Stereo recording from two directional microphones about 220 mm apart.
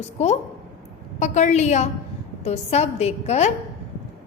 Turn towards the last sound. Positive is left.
turn(degrees=30)  # may be behind; listen again after turning